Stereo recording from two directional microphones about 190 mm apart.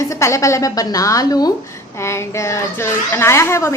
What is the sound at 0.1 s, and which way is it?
A child's voice, 15° left (ahead or behind).